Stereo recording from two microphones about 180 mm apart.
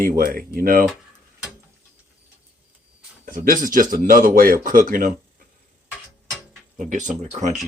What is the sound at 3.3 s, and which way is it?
Speech, 50° right (ahead or behind).